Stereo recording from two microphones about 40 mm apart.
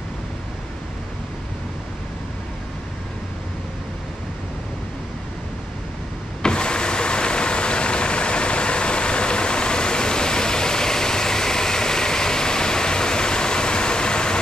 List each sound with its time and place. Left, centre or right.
6.4 s vehicle: left